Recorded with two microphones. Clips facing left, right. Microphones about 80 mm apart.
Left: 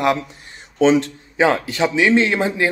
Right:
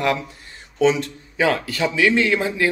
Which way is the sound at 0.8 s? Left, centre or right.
Left.